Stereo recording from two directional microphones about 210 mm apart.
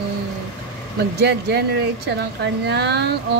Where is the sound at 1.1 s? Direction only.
50° right (ahead or behind).